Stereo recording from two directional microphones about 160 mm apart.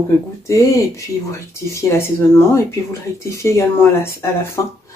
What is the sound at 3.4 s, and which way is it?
A woman's voice, 15° left (ahead or behind).